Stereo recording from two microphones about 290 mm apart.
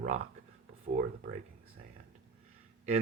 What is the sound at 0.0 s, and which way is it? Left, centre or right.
Speech, right.